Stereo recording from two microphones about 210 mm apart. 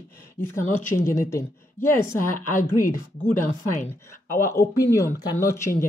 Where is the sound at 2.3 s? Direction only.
40° left (ahead or behind).